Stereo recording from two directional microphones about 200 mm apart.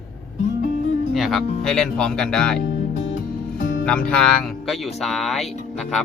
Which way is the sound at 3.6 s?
45° left (ahead or behind).